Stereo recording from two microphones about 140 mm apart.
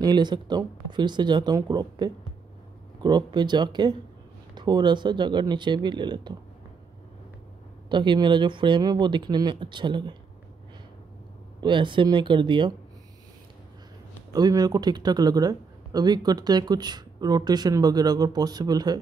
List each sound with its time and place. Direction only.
0.0 s speech: 30° right (ahead or behind)
7.9 s speech: 35° right (ahead or behind)
11.6 s speech: 35° right (ahead or behind)
14.3 s speech: 30° right (ahead or behind)